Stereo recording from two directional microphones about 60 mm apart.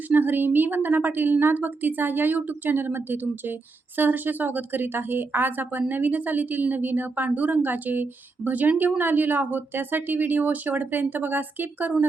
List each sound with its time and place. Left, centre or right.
0.1 s a woman's voice: right